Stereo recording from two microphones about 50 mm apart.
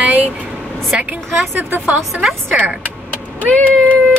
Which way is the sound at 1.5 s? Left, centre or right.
Right.